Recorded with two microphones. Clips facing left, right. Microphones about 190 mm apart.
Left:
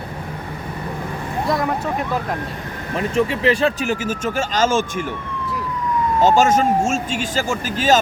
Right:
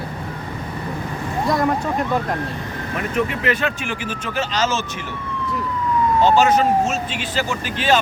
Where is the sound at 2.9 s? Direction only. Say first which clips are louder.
Left 3 dB; 30° left (ahead or behind); by 4.8 s 50° left (ahead or behind).